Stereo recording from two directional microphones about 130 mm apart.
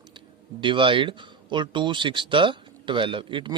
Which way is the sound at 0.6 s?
40° right (ahead or behind).